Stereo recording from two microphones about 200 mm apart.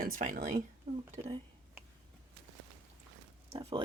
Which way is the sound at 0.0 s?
40° right (ahead or behind).